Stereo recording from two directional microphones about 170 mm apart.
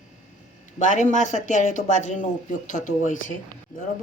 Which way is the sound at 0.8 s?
45° left (ahead or behind).